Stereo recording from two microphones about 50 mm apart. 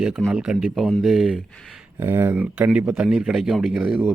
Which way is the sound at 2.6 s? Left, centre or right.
Right.